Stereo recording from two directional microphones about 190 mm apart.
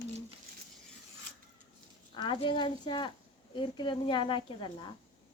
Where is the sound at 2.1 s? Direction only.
25° left (ahead or behind).